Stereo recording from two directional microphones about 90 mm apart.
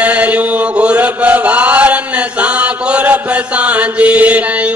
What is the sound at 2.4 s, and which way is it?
Chant, 15° right (ahead or behind).